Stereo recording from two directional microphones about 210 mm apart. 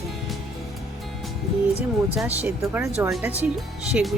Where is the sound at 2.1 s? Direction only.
5° right (ahead or behind).